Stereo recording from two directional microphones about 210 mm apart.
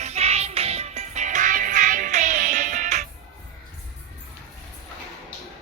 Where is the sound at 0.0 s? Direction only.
30° right (ahead or behind).